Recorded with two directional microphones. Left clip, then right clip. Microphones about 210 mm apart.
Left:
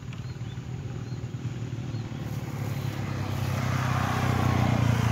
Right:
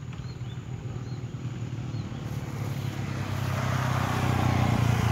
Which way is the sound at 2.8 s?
10° right (ahead or behind).